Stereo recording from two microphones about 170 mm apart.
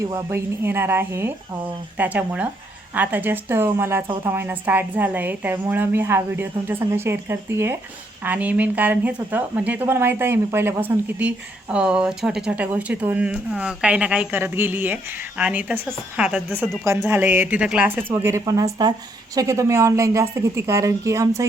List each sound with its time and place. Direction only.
0.0 s speech: 15° right (ahead or behind)